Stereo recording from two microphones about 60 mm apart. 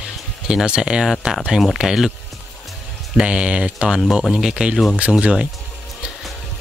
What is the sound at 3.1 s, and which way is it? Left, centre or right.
Speech, centre.